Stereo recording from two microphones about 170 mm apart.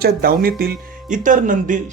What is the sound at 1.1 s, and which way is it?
Speech, 50° right (ahead or behind).